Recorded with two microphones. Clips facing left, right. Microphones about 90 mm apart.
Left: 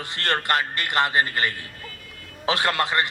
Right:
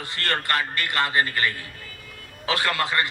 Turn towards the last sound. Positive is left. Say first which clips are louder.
# left 1 dB
turn(degrees=20)  # may be behind; listen again after turning